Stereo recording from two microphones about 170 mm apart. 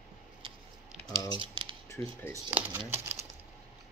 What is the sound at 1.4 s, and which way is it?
Scissors, 30° right (ahead or behind).